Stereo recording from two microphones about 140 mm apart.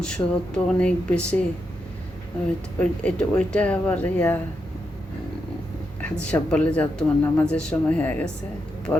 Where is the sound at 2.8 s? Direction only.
10° left (ahead or behind).